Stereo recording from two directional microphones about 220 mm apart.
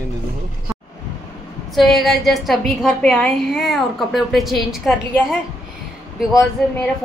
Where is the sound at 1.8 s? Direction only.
Centre (ahead or behind).